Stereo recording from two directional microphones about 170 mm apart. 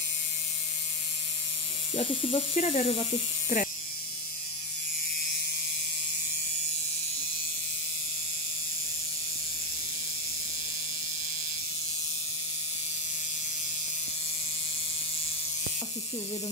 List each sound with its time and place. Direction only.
2.0 s speech: 35° left (ahead or behind)
3.5 s speech: 45° left (ahead or behind)